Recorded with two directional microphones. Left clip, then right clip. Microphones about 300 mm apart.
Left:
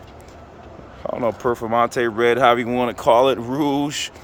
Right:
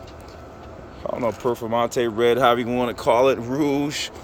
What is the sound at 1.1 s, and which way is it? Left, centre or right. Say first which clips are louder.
Speech: left 2 dB; centre.